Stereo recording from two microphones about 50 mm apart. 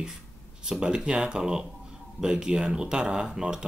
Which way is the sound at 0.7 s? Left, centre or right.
Centre.